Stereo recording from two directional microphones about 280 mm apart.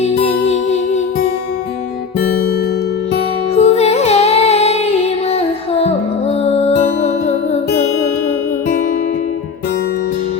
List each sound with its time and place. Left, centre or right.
0.0 s music: left
3.5 s music: left